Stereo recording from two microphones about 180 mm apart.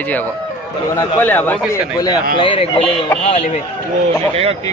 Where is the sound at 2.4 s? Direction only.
30° left (ahead or behind).